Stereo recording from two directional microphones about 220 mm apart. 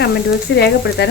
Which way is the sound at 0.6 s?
50° left (ahead or behind).